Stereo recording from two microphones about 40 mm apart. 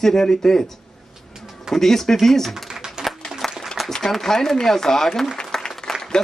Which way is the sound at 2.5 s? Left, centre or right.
Centre.